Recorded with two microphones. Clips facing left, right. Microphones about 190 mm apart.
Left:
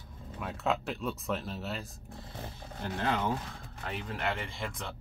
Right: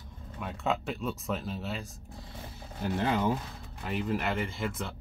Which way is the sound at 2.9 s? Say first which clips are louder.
Right 3 dB; 10° right (ahead or behind).